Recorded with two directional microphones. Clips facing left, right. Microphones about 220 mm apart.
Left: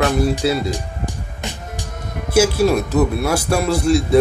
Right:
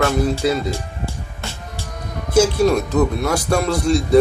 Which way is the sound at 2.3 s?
5° left (ahead or behind).